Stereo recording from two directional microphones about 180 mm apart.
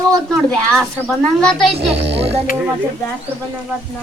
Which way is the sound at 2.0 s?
70° right (ahead or behind).